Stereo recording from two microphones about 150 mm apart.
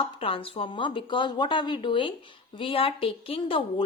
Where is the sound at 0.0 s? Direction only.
35° left (ahead or behind).